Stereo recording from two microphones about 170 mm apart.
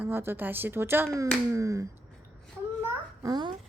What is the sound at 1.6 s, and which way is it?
Finger snapping, 20° right (ahead or behind).